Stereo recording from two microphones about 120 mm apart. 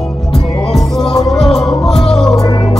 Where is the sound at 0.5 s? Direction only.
5° left (ahead or behind).